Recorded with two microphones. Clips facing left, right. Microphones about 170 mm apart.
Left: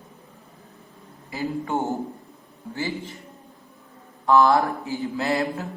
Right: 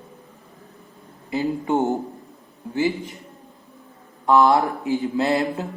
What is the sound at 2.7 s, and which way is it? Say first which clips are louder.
Speech: right 7 dB; 15° right (ahead or behind).